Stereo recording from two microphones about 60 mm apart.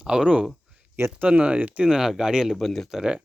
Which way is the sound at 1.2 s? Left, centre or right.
Right.